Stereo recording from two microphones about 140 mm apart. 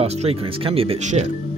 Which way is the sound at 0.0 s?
45° right (ahead or behind).